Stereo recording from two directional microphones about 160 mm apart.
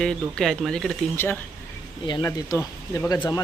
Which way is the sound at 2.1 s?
25° left (ahead or behind).